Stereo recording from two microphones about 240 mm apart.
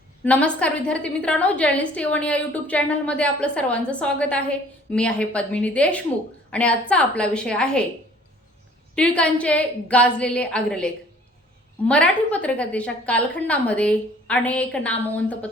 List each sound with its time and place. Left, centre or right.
0.3 s a woman's voice: centre
9.0 s a woman's voice: centre